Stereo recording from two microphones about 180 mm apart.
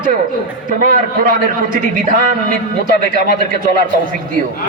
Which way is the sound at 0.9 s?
50° right (ahead or behind).